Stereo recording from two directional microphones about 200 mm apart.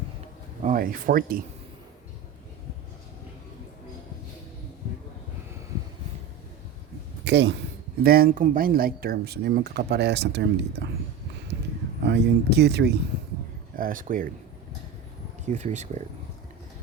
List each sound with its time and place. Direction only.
0.6 s speech: 40° right (ahead or behind)
7.3 s speech: 60° right (ahead or behind)
8.0 s speech: 50° right (ahead or behind)
12.0 s speech: 55° right (ahead or behind)
13.7 s speech: 45° right (ahead or behind)
15.4 s speech: 35° right (ahead or behind)